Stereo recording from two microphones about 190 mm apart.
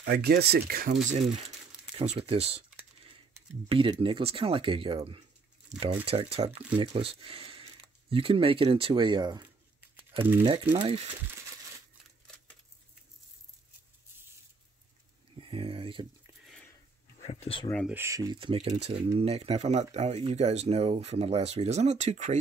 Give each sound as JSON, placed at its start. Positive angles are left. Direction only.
{"t": 0.0, "sound": "speech", "side_deg": -55}
{"t": 1.0, "sound": "speech", "side_deg": -35}
{"t": 3.6, "sound": "speech", "side_deg": -30}
{"t": 15.3, "sound": "a sound", "side_deg": -30}
{"t": 16.4, "sound": "a sound", "side_deg": 5}
{"t": 17.2, "sound": "speech", "side_deg": 35}
{"t": 17.8, "sound": "speech", "side_deg": -15}